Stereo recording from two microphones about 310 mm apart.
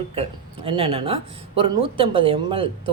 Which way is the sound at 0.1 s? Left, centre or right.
Centre.